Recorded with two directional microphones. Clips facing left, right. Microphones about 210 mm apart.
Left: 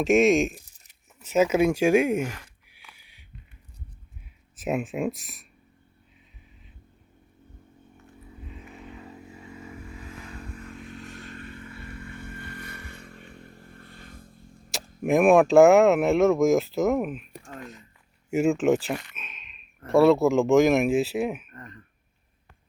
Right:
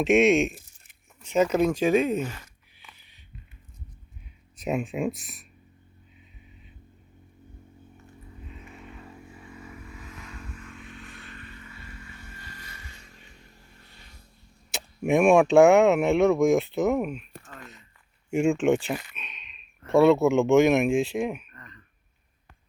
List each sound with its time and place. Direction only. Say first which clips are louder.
0.0 s speech: even; centre (ahead or behind)
1.2 s a sound: left 1 dB; 5° left (ahead or behind)
4.5 s speech: even; centre (ahead or behind)
7.9 s a sound: left 3 dB; centre (ahead or behind)
9.0 s vehicle: left 2 dB; 20° left (ahead or behind); by 14.3 s 50° left (ahead or behind)
15.0 s speech: left 1 dB; centre (ahead or behind)
21.5 s throat clearing: left 6 dB; 45° left (ahead or behind)